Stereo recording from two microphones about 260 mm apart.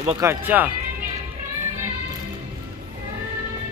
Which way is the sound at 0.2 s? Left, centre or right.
Centre.